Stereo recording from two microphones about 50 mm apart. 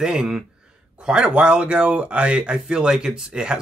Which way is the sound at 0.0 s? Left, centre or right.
Centre.